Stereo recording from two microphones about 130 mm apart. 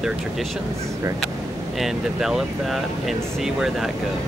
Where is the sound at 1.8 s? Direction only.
Centre (ahead or behind).